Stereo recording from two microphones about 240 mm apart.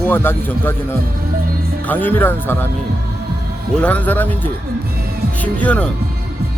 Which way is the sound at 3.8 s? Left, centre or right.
Centre.